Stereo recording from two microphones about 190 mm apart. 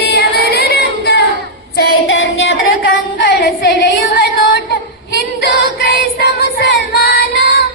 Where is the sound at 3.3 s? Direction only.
60° left (ahead or behind).